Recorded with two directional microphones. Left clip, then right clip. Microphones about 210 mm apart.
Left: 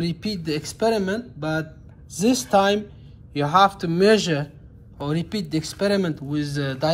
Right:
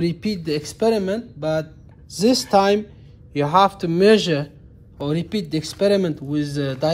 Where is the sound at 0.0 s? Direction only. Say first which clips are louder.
Right 4 dB; 35° right (ahead or behind).